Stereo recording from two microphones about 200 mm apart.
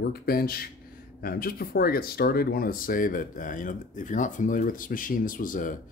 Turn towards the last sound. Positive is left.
turn(degrees=40)  # may be behind; listen again after turning